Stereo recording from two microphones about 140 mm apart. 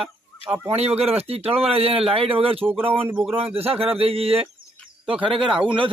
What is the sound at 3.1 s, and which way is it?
Speech, 10° right (ahead or behind).